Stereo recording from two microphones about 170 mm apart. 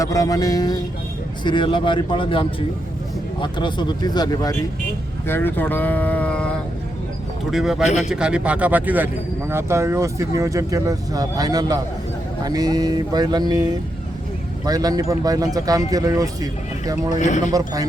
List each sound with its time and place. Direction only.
0.0 s a man's voice: 20° left (ahead or behind)
5.3 s speech: 10° left (ahead or behind)
7.5 s speech: centre (ahead or behind); by 17.2 s 20° right (ahead or behind)
17.2 s speech: 45° left (ahead or behind)